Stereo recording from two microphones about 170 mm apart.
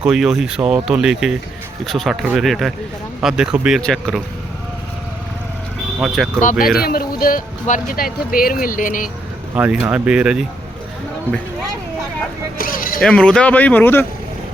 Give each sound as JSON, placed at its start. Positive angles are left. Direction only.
{"t": 0.0, "sound": "speech", "side_deg": -5}
{"t": 6.4, "sound": "speech", "side_deg": 50}
{"t": 6.8, "sound": "speech", "side_deg": 60}
{"t": 9.6, "sound": "speech", "side_deg": -10}
{"t": 12.5, "sound": "speech", "side_deg": 55}
{"t": 13.0, "sound": "speech", "side_deg": 5}